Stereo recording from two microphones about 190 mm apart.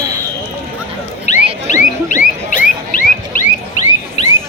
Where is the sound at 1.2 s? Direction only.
40° left (ahead or behind).